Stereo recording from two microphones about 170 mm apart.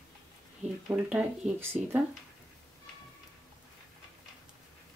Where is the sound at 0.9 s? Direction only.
10° right (ahead or behind).